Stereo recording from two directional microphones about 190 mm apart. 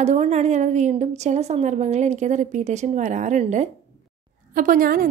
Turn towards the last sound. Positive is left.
turn(degrees=-45)  # may be behind; listen again after turning